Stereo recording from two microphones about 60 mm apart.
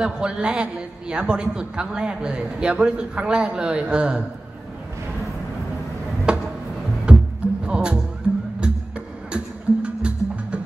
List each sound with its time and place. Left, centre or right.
0.0 s a man's voice: centre
6.3 s music: centre